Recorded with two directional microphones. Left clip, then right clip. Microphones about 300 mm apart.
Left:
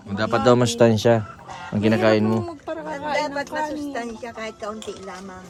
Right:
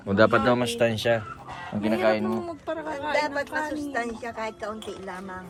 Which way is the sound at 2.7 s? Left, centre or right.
Centre.